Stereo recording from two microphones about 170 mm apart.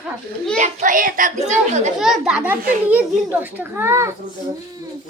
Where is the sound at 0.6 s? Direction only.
45° right (ahead or behind).